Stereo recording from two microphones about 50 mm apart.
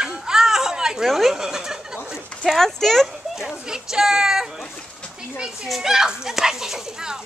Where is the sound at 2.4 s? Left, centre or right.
Centre.